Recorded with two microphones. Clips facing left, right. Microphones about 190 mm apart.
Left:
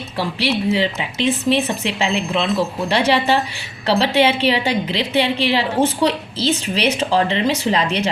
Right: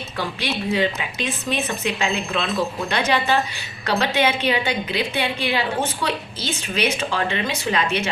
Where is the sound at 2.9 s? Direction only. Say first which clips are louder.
Left 5 dB; 30° left (ahead or behind).